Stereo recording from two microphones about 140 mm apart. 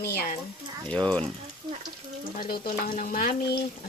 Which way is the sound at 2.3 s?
90° left.